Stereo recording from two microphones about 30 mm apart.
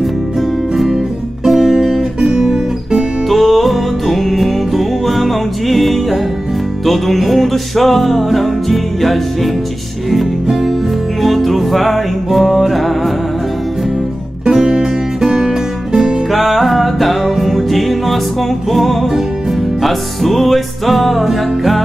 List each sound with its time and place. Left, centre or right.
1.5 s music: centre
2.3 s guitar: centre
3.3 s music: centre
14.4 s music: right
16.3 s music: centre